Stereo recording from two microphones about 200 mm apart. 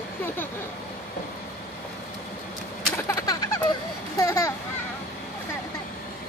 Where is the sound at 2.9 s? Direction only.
15° left (ahead or behind).